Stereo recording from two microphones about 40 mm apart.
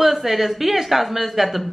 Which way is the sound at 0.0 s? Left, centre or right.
Centre.